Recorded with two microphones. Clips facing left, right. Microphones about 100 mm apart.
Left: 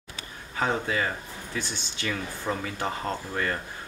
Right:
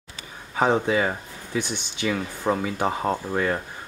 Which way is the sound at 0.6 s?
15° right (ahead or behind).